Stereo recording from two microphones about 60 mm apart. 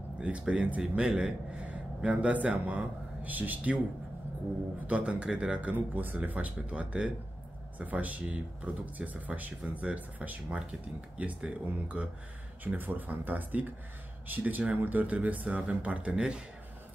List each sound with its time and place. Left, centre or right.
0.2 s speech: right
4.8 s speech: centre
12.6 s speech: right